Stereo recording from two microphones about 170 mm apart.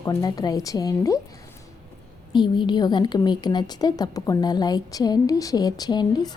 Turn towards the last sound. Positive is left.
turn(degrees=25)  # may be behind; listen again after turning